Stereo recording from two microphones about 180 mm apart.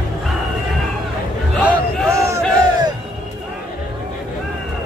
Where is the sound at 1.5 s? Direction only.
10° right (ahead or behind).